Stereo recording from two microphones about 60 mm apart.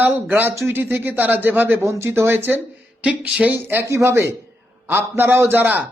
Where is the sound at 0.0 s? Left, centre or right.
Right.